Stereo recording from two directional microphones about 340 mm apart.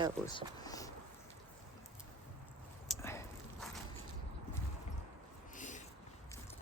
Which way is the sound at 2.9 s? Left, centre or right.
Centre.